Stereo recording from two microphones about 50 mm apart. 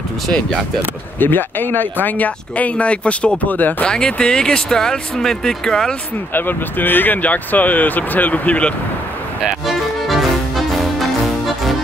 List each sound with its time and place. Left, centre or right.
1.2 s speech: left
3.8 s speech: centre
6.3 s speech: left
9.4 s music: centre